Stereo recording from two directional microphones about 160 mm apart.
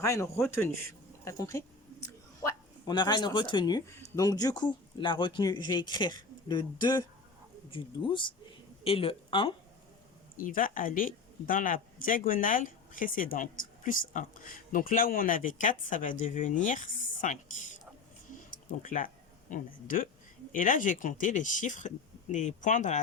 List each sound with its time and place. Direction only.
0.0 s a man's voice: 20° left (ahead or behind)
1.2 s a sound: 20° left (ahead or behind)
2.9 s speech: 30° left (ahead or behind)
10.3 s speech: 60° left (ahead or behind)
18.5 s speech: 55° left (ahead or behind)